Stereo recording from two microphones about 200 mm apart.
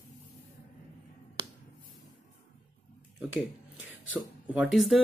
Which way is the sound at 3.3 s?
70° left (ahead or behind).